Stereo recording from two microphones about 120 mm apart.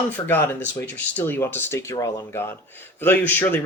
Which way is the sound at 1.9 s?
30° left (ahead or behind).